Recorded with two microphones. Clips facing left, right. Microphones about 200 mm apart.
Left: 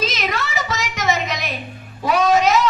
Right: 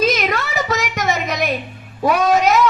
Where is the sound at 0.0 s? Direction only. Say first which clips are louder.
Right 5 dB; 55° right (ahead or behind).